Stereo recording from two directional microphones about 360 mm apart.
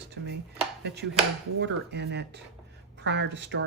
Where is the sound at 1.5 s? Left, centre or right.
Right.